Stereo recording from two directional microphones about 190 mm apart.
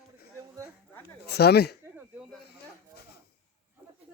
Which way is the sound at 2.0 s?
5° right (ahead or behind).